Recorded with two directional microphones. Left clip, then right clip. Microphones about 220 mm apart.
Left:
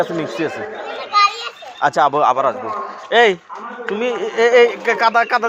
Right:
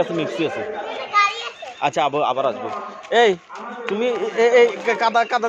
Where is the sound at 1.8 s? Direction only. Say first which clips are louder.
Left 5 dB; 20° left (ahead or behind).